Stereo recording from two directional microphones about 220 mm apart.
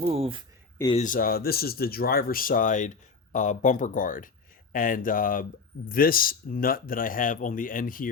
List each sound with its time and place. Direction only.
0.0 s speech: 25° right (ahead or behind)
0.9 s speech: 35° left (ahead or behind)